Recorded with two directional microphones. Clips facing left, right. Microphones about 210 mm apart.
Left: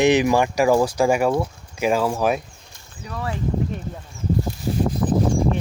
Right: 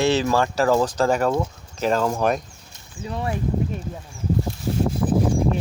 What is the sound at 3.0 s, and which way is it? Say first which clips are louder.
Speech: right 2 dB; 25° right (ahead or behind).